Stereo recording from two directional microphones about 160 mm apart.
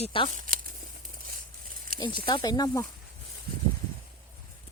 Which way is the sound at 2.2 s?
25° left (ahead or behind).